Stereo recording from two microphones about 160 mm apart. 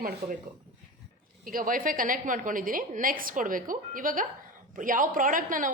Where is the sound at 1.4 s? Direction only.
60° right (ahead or behind).